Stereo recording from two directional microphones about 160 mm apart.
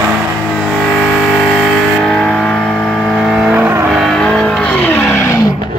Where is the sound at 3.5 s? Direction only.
15° right (ahead or behind).